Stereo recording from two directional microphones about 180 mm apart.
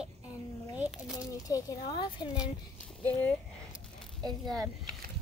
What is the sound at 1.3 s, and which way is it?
Speech, 20° left (ahead or behind).